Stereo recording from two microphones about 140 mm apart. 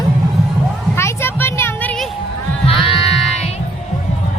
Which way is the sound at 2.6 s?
40° left (ahead or behind).